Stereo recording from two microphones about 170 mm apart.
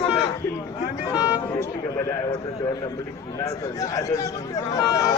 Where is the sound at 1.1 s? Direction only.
25° left (ahead or behind).